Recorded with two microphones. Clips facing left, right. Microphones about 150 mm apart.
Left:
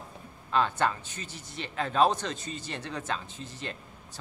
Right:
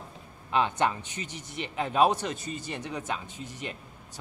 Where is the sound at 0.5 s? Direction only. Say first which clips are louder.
Right 1 dB; 15° right (ahead or behind).